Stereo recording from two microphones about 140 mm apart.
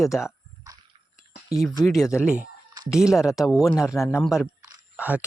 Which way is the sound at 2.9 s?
5° right (ahead or behind).